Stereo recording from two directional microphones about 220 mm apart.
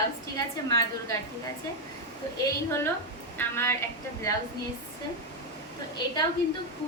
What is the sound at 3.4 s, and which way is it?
A woman's voice, 10° left (ahead or behind).